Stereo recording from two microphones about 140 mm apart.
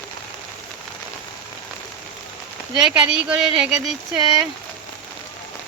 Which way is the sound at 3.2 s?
5° right (ahead or behind).